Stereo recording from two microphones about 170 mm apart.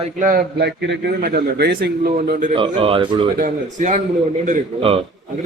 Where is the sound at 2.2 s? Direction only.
50° right (ahead or behind).